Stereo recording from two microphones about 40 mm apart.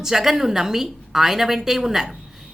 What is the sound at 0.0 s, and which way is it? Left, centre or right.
Speech, centre.